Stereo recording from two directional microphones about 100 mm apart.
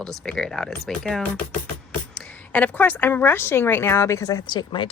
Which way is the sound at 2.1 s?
15° left (ahead or behind).